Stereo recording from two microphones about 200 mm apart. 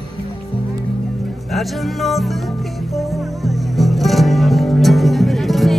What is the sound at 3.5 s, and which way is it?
Music, centre (ahead or behind).